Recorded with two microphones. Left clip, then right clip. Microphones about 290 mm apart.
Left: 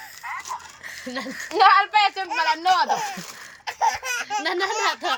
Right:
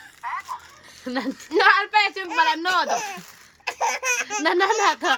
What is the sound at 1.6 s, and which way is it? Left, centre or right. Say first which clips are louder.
A woman's voice: left 2 dB; centre.